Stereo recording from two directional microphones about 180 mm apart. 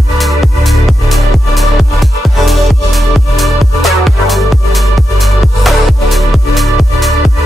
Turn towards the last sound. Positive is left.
turn(degrees=0)  # may be behind; listen again after turning